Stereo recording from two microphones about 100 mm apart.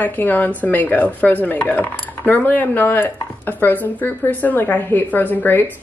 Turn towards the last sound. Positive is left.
turn(degrees=20)  # may be behind; listen again after turning